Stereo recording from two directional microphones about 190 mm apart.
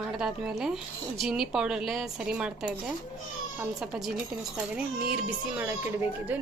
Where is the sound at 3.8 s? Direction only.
5° right (ahead or behind).